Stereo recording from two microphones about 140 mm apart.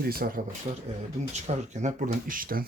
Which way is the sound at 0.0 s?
90° right.